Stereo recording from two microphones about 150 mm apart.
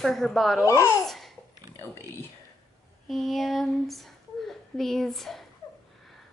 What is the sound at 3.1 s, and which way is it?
Speech, centre (ahead or behind).